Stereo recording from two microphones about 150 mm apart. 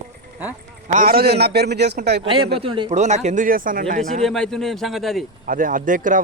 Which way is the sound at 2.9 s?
50° right (ahead or behind).